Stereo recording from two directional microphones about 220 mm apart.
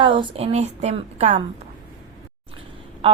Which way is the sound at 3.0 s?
25° right (ahead or behind).